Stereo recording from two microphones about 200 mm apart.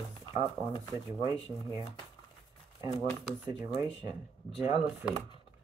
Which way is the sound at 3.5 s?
15° right (ahead or behind).